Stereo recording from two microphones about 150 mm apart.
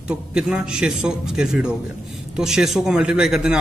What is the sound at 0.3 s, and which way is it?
A man's voice, 5° right (ahead or behind).